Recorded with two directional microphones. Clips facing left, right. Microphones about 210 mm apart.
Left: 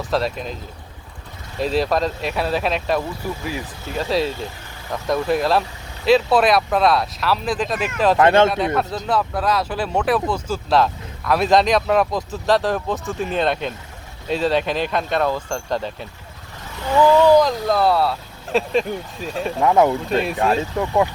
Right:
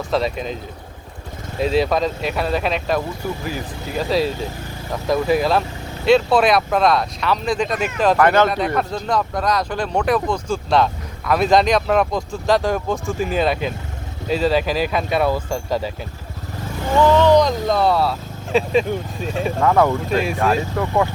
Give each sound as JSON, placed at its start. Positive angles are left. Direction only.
{"t": 0.1, "sound": "speech", "side_deg": 0}
{"t": 1.5, "sound": "speech", "side_deg": 0}
{"t": 8.2, "sound": "speech", "side_deg": 25}
{"t": 8.4, "sound": "speech", "side_deg": 0}
{"t": 17.1, "sound": "speech", "side_deg": 10}
{"t": 19.5, "sound": "speech", "side_deg": 20}
{"t": 20.1, "sound": "speech", "side_deg": 0}
{"t": 20.5, "sound": "speech", "side_deg": 20}